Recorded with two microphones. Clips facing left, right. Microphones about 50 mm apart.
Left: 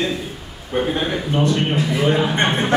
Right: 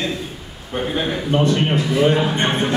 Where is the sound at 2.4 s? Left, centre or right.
Left.